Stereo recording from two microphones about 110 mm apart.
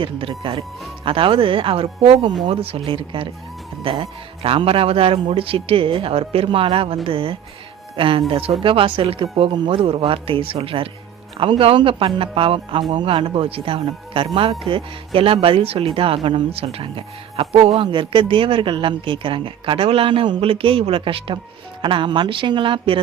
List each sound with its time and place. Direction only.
0.0 s speech: 50° right (ahead or behind)